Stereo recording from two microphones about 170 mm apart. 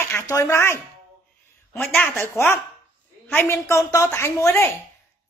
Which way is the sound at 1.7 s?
Centre (ahead or behind).